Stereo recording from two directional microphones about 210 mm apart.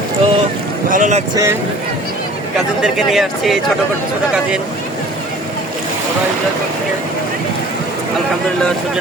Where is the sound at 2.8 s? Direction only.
Centre (ahead or behind).